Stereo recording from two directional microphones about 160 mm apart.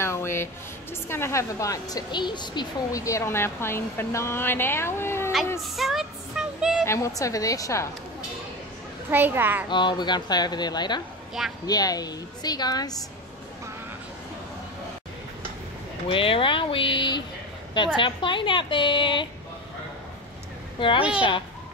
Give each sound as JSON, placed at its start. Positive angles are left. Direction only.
{"t": 0.0, "sound": "a woman's voice", "side_deg": 15}
{"t": 5.8, "sound": "music", "side_deg": 0}
{"t": 6.9, "sound": "speech", "side_deg": 20}
{"t": 9.1, "sound": "a child's voice", "side_deg": -10}
{"t": 9.7, "sound": "speech", "side_deg": 30}
{"t": 16.1, "sound": "a woman's voice", "side_deg": 35}